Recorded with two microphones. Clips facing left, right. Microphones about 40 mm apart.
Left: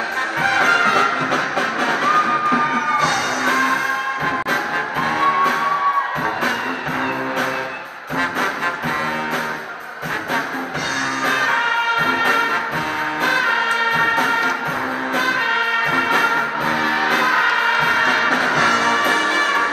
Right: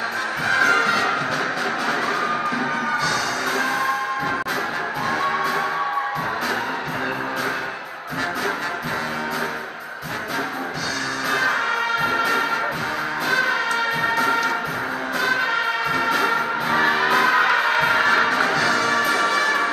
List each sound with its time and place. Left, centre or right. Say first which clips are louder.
0.4 s music: left 2 dB; left
11.2 s music: left 3 dB; left
18.0 s music: left 1 dB; left